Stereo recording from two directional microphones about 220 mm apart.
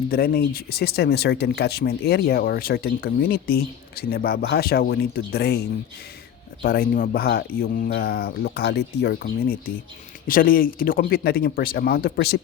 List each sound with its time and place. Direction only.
0.1 s speech: 45° left (ahead or behind)